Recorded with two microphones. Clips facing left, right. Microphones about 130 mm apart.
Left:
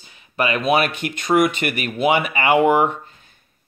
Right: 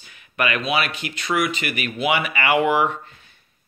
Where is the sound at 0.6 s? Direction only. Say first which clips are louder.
Left 5 dB; 50° left (ahead or behind).